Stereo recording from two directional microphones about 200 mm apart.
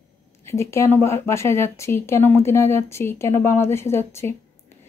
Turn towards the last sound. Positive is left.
turn(degrees=10)  # may be behind; listen again after turning